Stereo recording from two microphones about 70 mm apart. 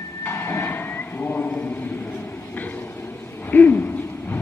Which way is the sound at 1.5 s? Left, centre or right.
Left.